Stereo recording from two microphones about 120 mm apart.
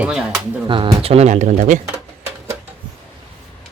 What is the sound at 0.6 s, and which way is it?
Speech, 45° right (ahead or behind).